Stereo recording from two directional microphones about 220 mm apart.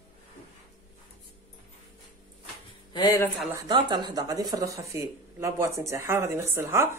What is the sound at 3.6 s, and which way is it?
Speech, 20° right (ahead or behind).